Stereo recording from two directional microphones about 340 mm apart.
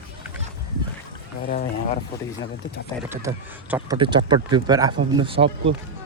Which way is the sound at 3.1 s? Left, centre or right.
Centre.